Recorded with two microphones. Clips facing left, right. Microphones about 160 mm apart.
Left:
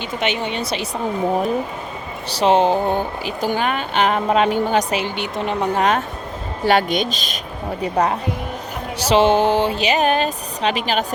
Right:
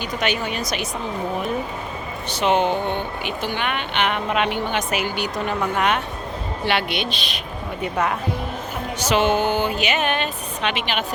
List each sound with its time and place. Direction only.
0.0 s a woman's voice: 20° left (ahead or behind)
2.2 s speech: 35° left (ahead or behind)
5.6 s speech: 35° left (ahead or behind)